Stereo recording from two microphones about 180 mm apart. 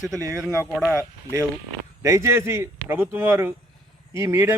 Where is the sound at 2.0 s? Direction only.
15° right (ahead or behind).